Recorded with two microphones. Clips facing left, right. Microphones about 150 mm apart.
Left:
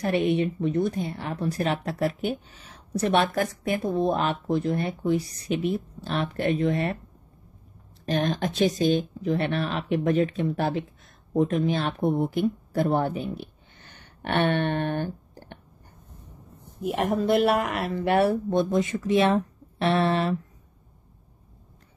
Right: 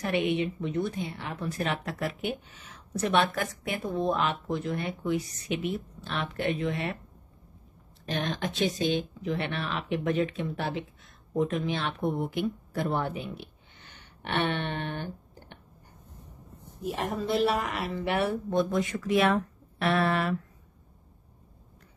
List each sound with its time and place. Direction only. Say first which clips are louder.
0.0 s speech: left 4 dB; 40° left (ahead or behind)
8.0 s speech: left 6 dB; 40° left (ahead or behind)
16.8 s speech: left 6 dB; 60° left (ahead or behind); by 18.4 s 45° left (ahead or behind)
18.6 s speech: left 1 dB; 20° left (ahead or behind)